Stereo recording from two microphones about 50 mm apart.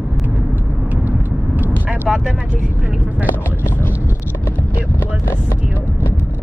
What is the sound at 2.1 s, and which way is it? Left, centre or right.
Speech, centre.